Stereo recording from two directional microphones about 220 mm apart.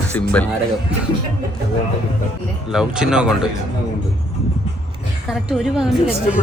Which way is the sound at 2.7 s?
5° right (ahead or behind).